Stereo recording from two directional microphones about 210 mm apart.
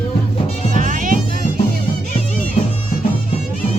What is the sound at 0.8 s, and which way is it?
Music, 40° right (ahead or behind).